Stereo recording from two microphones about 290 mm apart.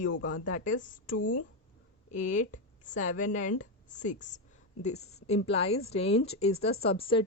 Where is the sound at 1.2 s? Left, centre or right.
Left.